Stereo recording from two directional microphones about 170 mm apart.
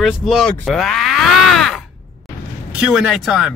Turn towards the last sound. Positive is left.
turn(degrees=0)  # may be behind; listen again after turning